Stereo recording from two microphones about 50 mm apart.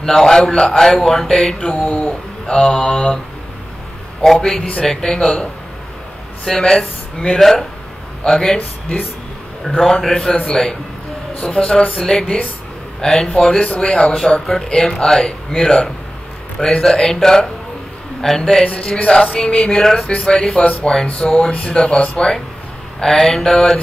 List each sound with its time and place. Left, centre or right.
0.0 s speech: centre
1.9 s speech: left
4.2 s speech: centre
9.8 s speech: centre
11.4 s music: left
12.0 s speech: centre
13.6 s music: left
14.7 s speech: centre
18.7 s music: left
19.8 s speech: centre
20.1 s speech: centre
21.5 s music: left
22.9 s speech: centre